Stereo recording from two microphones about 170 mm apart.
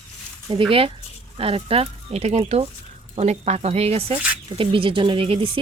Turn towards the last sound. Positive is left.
turn(degrees=-30)  # may be behind; listen again after turning